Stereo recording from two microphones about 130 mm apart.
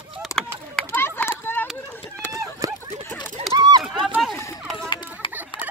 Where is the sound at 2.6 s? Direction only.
25° right (ahead or behind).